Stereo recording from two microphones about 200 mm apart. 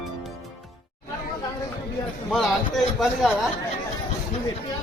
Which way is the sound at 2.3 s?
Centre (ahead or behind).